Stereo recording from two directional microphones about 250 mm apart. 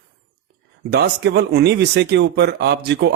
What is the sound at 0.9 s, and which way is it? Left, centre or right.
Speech, right.